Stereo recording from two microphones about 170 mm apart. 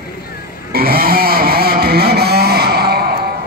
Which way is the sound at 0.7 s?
65° right (ahead or behind).